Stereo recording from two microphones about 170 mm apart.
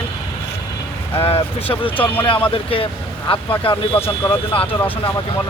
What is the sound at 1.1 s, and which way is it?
Speech, 35° left (ahead or behind).